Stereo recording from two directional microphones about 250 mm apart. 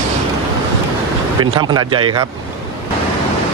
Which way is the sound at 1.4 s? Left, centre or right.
Centre.